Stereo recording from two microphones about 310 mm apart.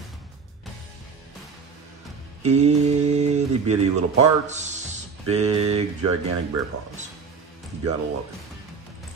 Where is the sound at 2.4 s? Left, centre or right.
Right.